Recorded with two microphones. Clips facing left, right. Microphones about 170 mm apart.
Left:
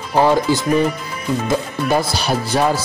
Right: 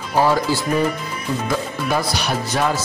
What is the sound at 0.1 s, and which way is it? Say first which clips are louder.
A man's voice: left 3 dB; 20° left (ahead or behind).